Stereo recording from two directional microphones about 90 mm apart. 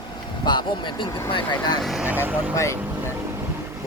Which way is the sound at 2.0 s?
20° right (ahead or behind).